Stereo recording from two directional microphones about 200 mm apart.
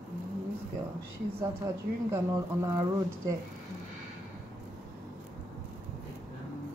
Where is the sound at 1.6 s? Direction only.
15° right (ahead or behind).